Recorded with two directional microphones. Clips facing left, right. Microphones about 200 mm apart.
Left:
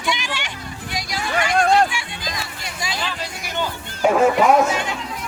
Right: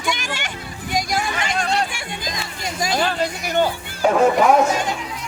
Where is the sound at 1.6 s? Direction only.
50° left (ahead or behind).